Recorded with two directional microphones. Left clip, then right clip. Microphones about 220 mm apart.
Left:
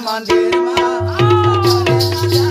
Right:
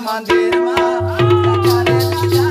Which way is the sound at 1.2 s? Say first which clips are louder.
Left 2 dB; 5° right (ahead or behind).